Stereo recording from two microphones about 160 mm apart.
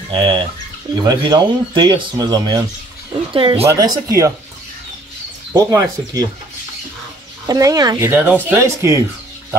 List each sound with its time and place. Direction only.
0.1 s speech: 30° right (ahead or behind)
3.6 s speech: 20° right (ahead or behind)
5.5 s speech: 20° right (ahead or behind)
7.4 s speech: 20° right (ahead or behind)